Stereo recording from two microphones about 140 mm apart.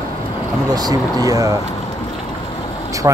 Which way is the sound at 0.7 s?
25° right (ahead or behind).